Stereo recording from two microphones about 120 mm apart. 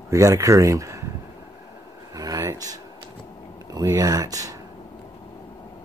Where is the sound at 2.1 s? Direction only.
30° right (ahead or behind).